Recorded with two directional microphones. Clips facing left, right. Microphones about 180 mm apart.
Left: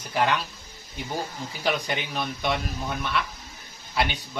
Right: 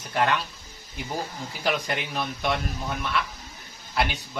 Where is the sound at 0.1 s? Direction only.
Centre (ahead or behind).